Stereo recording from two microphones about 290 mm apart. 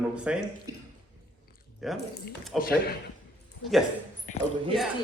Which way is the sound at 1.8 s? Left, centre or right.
Centre.